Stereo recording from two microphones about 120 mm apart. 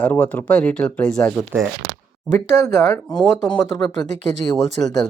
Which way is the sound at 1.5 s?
15° right (ahead or behind).